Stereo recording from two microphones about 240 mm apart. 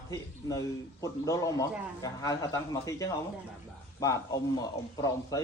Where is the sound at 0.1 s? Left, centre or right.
Centre.